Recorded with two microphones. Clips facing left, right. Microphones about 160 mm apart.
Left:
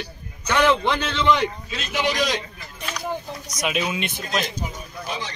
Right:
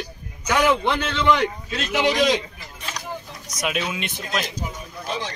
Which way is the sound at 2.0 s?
20° right (ahead or behind).